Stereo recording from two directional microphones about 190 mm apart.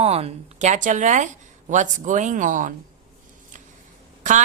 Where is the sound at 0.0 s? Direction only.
30° right (ahead or behind).